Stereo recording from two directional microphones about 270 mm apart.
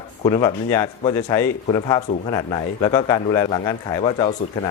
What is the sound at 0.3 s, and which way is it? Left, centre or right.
Speech, centre.